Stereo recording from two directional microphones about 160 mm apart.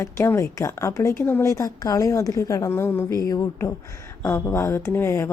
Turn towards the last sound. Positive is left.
turn(degrees=15)  # may be behind; listen again after turning